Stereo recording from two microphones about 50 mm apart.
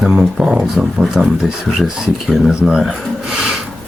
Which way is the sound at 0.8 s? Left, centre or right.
Centre.